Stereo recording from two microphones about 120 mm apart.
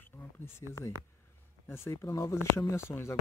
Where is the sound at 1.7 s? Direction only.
20° left (ahead or behind).